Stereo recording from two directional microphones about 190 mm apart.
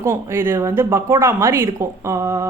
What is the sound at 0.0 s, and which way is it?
Speech, 15° right (ahead or behind).